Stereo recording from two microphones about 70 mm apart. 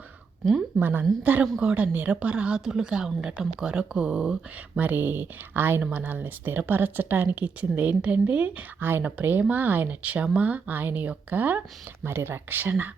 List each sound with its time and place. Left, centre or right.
0.8 s speech: right; by 4.8 s centre
4.8 s speech: right
12.0 s speech: right